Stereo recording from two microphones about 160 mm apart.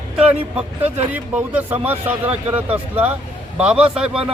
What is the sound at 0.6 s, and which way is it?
Speech, 10° right (ahead or behind).